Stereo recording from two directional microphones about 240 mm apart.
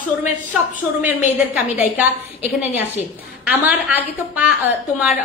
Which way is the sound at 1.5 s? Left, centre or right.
Centre.